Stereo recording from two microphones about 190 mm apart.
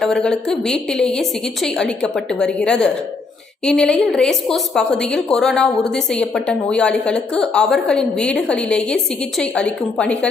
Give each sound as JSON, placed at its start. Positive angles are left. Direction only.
{"t": 0.0, "sound": "a woman's voice", "side_deg": 5}